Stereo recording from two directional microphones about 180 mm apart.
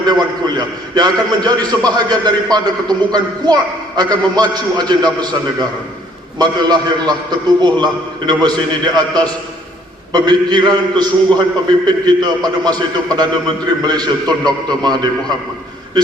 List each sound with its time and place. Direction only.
0.0 s a man's voice: 20° right (ahead or behind)